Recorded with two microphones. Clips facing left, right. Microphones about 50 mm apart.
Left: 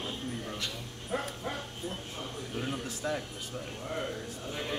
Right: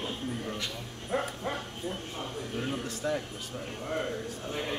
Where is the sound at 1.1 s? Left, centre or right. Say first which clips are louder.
Right 3 dB; centre.